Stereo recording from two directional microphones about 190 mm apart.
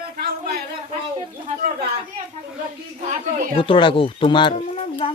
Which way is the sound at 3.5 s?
25° left (ahead or behind).